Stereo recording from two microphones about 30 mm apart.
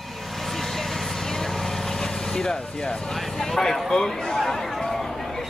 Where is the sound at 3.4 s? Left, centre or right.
Centre.